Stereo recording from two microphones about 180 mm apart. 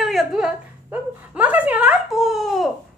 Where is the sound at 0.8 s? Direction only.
10° right (ahead or behind).